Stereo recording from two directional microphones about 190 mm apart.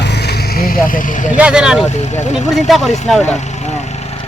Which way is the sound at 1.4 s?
5° right (ahead or behind).